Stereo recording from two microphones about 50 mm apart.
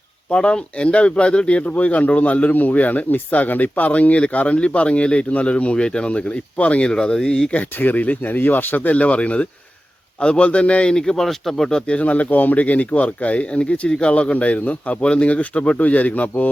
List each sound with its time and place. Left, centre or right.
0.3 s speech: centre
6.9 s speech: centre
7.5 s speech: left; by 11.7 s centre
11.7 s speech: left